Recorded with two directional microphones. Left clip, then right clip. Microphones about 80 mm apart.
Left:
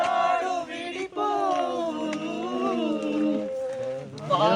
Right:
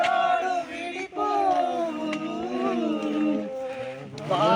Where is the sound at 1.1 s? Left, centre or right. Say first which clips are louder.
Right 1 dB; centre.